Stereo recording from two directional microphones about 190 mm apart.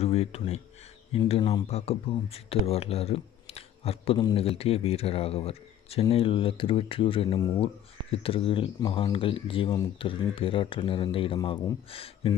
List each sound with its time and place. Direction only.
0.0 s speech: 35° left (ahead or behind)